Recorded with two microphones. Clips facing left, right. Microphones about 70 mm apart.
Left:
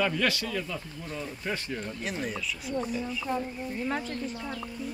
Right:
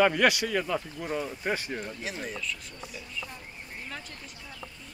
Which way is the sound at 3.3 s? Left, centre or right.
Left.